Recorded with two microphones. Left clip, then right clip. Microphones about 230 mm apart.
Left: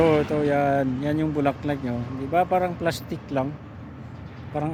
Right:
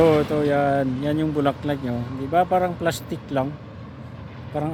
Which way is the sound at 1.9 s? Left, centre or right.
Right.